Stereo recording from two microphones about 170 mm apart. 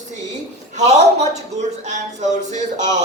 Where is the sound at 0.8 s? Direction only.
40° right (ahead or behind).